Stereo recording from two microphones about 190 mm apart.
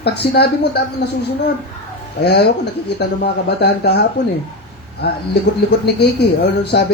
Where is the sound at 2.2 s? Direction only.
60° left (ahead or behind).